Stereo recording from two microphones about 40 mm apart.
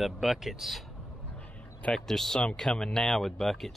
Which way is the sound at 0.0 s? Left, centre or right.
Centre.